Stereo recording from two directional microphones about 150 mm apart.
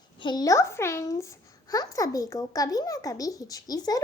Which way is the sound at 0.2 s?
30° left (ahead or behind).